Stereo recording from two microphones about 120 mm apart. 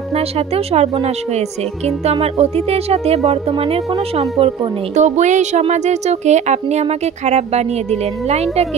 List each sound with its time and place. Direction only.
0.1 s speech: 60° right (ahead or behind)
4.9 s speech: 80° right; by 8.6 s 65° right (ahead or behind)